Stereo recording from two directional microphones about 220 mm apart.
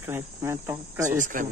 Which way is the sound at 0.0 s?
10° right (ahead or behind).